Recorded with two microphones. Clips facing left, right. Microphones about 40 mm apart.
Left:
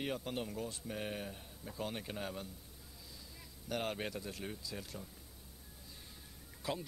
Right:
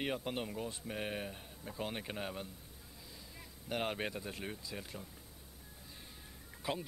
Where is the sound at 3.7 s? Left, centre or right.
Right.